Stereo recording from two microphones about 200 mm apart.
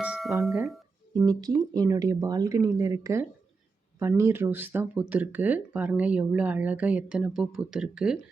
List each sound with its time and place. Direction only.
0.0 s speech: 5° right (ahead or behind)
1.1 s speech: 20° right (ahead or behind)